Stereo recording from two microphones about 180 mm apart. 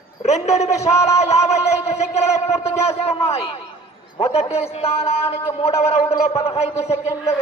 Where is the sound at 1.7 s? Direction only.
35° left (ahead or behind).